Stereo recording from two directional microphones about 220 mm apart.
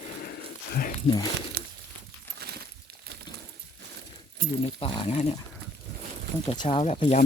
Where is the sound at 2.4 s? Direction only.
45° right (ahead or behind).